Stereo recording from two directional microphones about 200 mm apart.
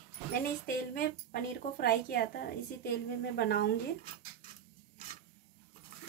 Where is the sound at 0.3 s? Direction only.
45° left (ahead or behind).